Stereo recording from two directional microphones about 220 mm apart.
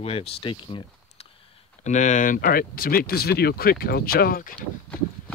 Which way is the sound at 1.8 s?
35° left (ahead or behind).